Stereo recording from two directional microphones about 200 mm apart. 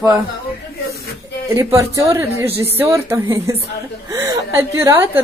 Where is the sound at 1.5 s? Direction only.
15° right (ahead or behind).